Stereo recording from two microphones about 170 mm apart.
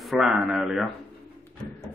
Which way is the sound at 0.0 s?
Centre (ahead or behind).